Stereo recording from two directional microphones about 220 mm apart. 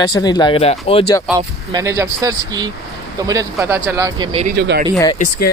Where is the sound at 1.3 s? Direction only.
15° right (ahead or behind).